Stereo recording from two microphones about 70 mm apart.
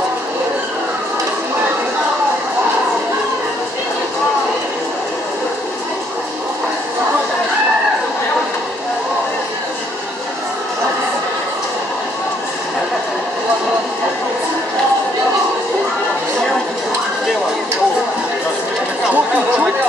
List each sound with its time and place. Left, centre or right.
19.0 s chatter: centre